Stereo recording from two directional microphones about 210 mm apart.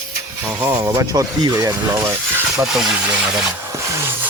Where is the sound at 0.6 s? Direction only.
15° right (ahead or behind).